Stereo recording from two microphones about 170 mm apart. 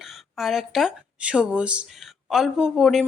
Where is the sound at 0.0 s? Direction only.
Centre (ahead or behind).